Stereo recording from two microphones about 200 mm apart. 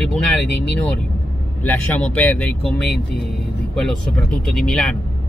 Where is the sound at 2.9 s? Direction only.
55° left (ahead or behind).